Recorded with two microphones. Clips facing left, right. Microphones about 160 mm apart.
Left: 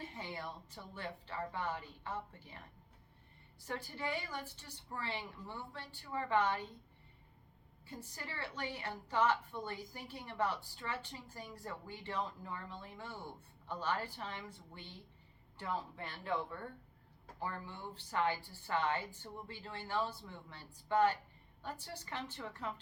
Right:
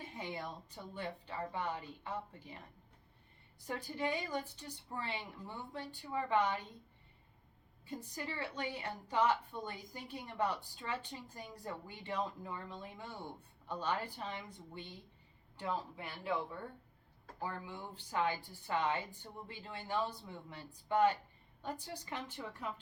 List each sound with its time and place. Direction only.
0.0 s a woman's voice: 15° right (ahead or behind)
3.7 s a woman's voice: 15° right (ahead or behind)
7.9 s a woman's voice: 15° right (ahead or behind)